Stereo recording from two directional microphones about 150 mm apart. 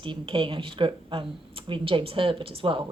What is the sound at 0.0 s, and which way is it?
A woman's voice, 35° right (ahead or behind).